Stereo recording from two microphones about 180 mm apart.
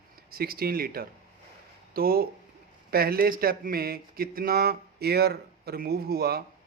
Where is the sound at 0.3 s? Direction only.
55° right (ahead or behind).